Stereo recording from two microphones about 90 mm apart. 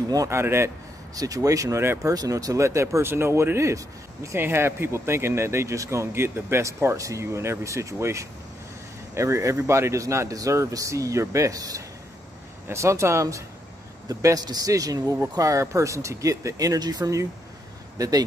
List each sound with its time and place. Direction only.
0.3 s speech: 30° right (ahead or behind)
1.1 s speech: 40° right (ahead or behind)